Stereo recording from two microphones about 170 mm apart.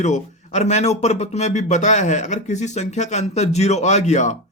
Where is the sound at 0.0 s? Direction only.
40° left (ahead or behind).